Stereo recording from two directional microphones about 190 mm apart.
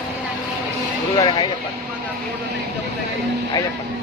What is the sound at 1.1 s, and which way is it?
Speech, 20° left (ahead or behind).